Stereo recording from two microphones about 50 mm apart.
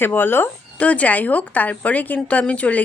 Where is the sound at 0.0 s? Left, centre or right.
Left.